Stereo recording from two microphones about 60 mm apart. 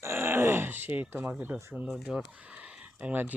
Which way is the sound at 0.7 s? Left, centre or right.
Right.